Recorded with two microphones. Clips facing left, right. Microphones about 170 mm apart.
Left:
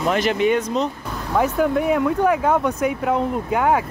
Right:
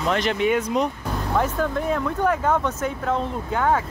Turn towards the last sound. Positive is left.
turn(degrees=10)  # may be behind; listen again after turning